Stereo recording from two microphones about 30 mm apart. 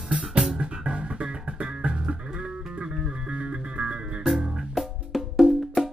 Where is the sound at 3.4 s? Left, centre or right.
Right.